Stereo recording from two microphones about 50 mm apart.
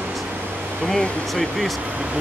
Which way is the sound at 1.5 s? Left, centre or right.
Centre.